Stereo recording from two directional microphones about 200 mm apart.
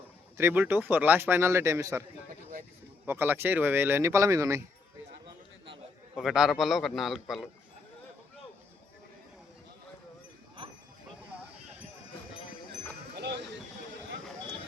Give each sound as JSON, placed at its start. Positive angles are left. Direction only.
{"t": 0.3, "sound": "a man's voice", "side_deg": -10}
{"t": 3.1, "sound": "a man's voice", "side_deg": -10}
{"t": 6.1, "sound": "a man's voice", "side_deg": 0}
{"t": 13.1, "sound": "a sound", "side_deg": -55}